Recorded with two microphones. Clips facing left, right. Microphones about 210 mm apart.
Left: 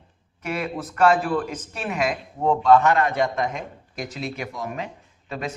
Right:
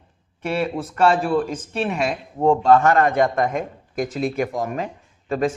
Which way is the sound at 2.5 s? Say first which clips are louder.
Right 2 dB; 45° right (ahead or behind).